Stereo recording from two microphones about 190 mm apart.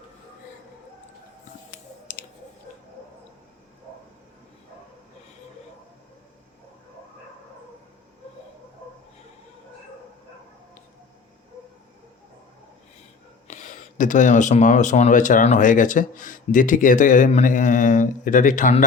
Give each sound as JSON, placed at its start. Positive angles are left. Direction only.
{"t": 2.1, "sound": "clicking", "side_deg": 45}
{"t": 13.5, "sound": "speech", "side_deg": 40}